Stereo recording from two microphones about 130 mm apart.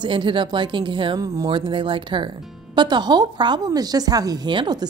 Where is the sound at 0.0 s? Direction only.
40° right (ahead or behind).